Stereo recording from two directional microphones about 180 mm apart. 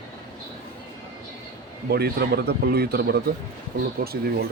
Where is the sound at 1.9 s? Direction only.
60° right (ahead or behind).